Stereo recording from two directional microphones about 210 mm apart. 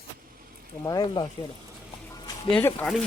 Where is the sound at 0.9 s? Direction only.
20° left (ahead or behind).